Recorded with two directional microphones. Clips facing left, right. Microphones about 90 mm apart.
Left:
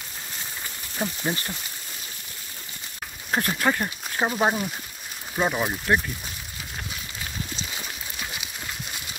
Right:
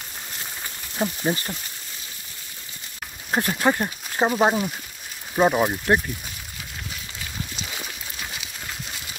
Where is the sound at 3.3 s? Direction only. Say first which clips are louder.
Right 2 dB; 25° right (ahead or behind).